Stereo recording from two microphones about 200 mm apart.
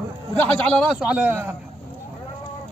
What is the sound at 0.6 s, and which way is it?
Speech, 5° left (ahead or behind).